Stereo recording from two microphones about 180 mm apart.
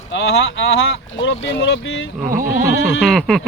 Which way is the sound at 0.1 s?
90° left.